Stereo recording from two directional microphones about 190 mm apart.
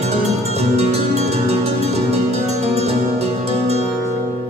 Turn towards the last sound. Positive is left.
turn(degrees=-35)  # may be behind; listen again after turning